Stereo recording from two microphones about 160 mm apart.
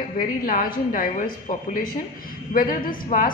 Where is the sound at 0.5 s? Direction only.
60° left (ahead or behind).